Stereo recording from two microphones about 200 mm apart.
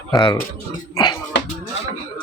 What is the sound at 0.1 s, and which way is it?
Speech, 20° left (ahead or behind).